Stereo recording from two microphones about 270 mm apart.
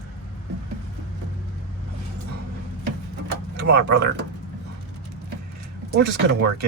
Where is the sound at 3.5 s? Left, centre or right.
Right.